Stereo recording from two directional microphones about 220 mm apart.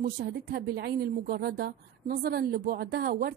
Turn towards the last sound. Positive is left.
turn(degrees=-45)  # may be behind; listen again after turning